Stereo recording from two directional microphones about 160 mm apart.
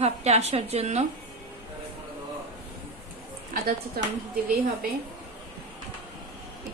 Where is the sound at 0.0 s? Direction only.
40° right (ahead or behind).